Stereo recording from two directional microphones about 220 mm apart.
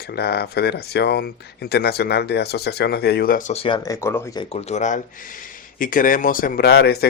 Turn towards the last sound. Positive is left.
turn(degrees=45)  # may be behind; listen again after turning